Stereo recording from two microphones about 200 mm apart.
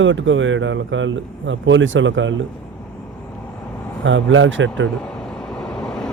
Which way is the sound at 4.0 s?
70° right (ahead or behind).